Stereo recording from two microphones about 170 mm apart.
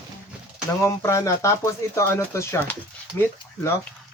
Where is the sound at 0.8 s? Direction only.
15° left (ahead or behind).